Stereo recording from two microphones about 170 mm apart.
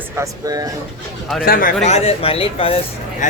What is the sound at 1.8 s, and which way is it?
Speech, 40° left (ahead or behind).